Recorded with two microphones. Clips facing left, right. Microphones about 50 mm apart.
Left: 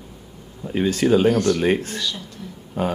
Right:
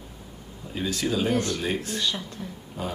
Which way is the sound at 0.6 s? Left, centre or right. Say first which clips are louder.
Left 9 dB; left.